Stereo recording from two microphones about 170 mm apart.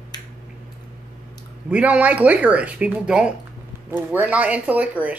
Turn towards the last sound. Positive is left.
turn(degrees=-10)  # may be behind; listen again after turning